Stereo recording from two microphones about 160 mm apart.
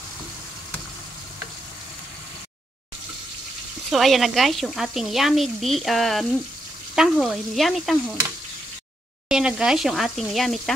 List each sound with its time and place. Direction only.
3.9 s speech: centre (ahead or behind)
9.3 s speech: 5° right (ahead or behind)